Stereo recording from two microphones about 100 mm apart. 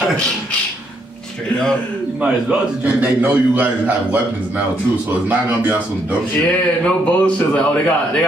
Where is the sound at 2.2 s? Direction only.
10° right (ahead or behind).